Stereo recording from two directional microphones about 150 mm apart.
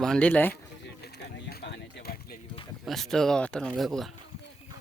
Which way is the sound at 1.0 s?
90° left.